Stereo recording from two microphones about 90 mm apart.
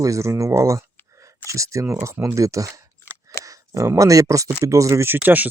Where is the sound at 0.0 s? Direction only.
35° right (ahead or behind).